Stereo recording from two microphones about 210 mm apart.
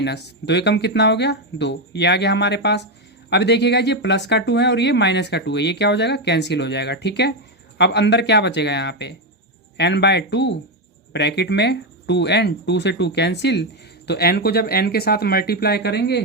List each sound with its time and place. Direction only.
0.0 s speech: 55° left (ahead or behind)